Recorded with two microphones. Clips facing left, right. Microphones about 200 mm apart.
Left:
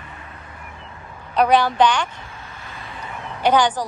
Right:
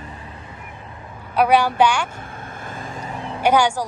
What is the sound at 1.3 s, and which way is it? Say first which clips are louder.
Speech: even; 10° right (ahead or behind).